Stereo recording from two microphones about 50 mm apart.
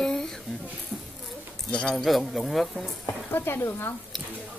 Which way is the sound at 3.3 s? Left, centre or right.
Left.